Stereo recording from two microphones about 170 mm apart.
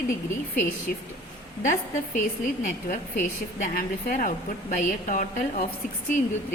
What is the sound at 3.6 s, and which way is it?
A woman's voice, 50° left (ahead or behind).